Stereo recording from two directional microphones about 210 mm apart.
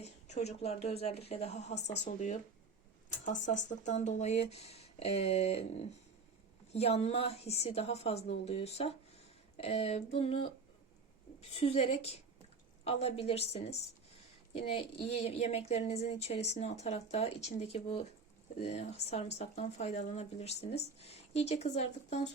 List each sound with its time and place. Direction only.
0.0 s a woman's voice: 30° left (ahead or behind)
11.5 s a woman's voice: 30° left (ahead or behind)
14.5 s a woman's voice: 25° left (ahead or behind)